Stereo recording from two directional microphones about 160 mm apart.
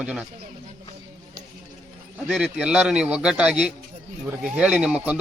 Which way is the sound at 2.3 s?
Centre (ahead or behind).